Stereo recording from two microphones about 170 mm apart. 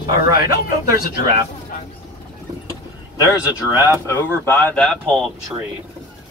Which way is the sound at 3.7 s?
15° right (ahead or behind).